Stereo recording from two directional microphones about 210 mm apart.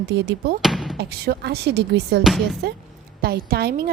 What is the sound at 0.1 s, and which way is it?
Speech, 55° right (ahead or behind).